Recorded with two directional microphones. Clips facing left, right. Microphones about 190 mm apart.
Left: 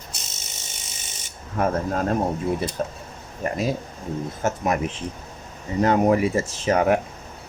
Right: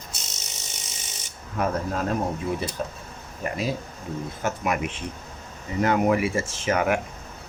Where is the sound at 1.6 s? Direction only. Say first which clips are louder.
Left 3 dB; 45° left (ahead or behind).